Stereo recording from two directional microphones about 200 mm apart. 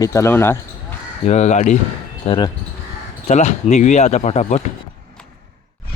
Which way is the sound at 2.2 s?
25° left (ahead or behind).